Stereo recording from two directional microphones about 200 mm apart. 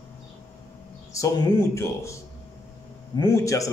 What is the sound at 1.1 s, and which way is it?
Speech, 15° left (ahead or behind).